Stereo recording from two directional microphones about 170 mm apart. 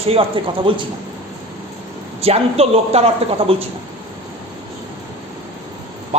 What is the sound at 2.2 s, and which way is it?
A woman's voice, 35° right (ahead or behind).